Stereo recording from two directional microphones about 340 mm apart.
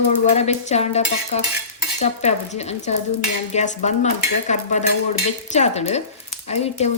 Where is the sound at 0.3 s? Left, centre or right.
Centre.